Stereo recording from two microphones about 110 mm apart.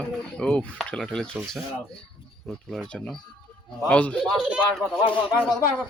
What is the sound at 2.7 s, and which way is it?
Speech, 5° left (ahead or behind).